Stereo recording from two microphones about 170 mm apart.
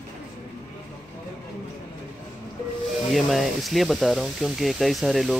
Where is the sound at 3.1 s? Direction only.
Centre (ahead or behind).